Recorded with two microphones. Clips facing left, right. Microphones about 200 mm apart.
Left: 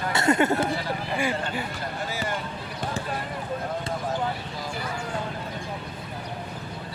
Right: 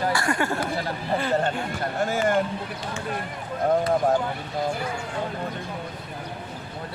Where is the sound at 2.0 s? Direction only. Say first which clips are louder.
Right 10 dB; 50° right (ahead or behind).